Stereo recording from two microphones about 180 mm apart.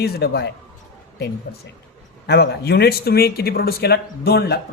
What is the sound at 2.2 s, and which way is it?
Speech, 60° left (ahead or behind).